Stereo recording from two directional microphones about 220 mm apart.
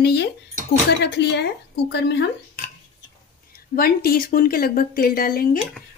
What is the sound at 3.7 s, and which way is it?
Speech, 45° left (ahead or behind).